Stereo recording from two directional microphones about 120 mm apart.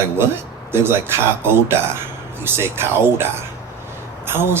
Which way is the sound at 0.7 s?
20° right (ahead or behind).